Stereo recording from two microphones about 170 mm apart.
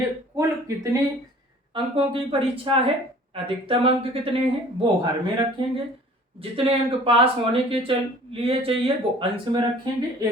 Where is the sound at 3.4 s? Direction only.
30° right (ahead or behind).